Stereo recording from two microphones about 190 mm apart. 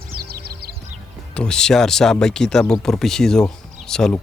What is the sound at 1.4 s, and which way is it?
Speech, 5° left (ahead or behind).